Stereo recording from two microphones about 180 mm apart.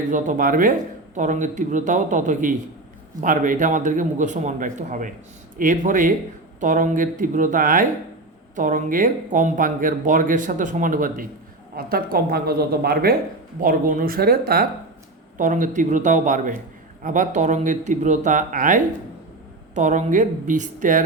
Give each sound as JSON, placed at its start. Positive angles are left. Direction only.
{"t": 0.1, "sound": "speech", "side_deg": -45}
{"t": 13.6, "sound": "speech", "side_deg": -50}
{"t": 15.4, "sound": "speech", "side_deg": -45}